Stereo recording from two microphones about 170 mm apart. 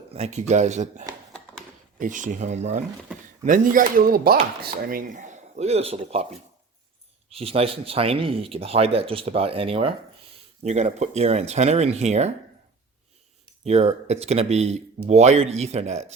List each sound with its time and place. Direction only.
0.1 s speech: 40° right (ahead or behind)
7.3 s speech: 35° right (ahead or behind)
13.7 s speech: 40° right (ahead or behind)